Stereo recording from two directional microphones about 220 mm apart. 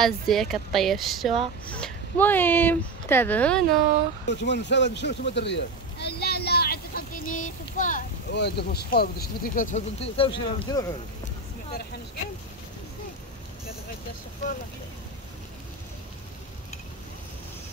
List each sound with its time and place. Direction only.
0.0 s speech: centre (ahead or behind)
4.3 s a sound: 50° left (ahead or behind); by 8.0 s 35° left (ahead or behind)
8.3 s speech: 50° left (ahead or behind); by 10.9 s 20° left (ahead or behind)